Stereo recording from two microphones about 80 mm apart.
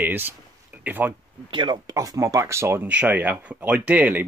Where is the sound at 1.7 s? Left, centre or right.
Right.